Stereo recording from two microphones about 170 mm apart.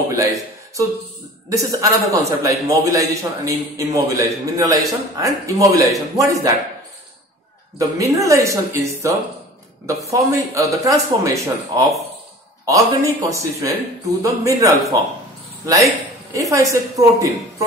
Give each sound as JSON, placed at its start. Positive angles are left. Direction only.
{"t": 0.1, "sound": "a sound", "side_deg": -20}
{"t": 1.5, "sound": "a man's voice", "side_deg": -20}
{"t": 8.0, "sound": "a man's voice", "side_deg": -20}